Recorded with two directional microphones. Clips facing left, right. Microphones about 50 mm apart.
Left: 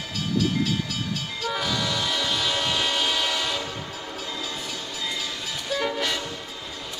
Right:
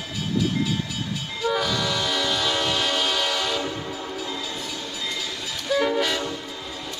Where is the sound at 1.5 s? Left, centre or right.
Centre.